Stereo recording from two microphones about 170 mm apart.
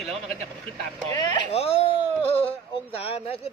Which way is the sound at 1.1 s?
25° left (ahead or behind).